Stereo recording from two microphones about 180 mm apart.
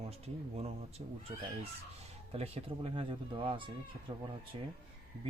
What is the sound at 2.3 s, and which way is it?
Speech, 30° right (ahead or behind).